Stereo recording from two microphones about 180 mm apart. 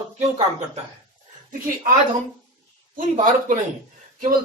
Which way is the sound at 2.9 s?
50° right (ahead or behind).